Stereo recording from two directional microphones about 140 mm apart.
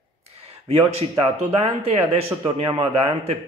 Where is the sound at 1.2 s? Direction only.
45° right (ahead or behind).